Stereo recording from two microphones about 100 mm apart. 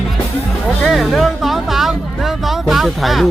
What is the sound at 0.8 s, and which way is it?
Speech, centre (ahead or behind).